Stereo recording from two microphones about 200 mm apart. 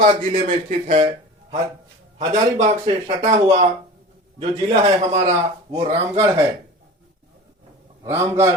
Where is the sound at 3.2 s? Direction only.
35° right (ahead or behind).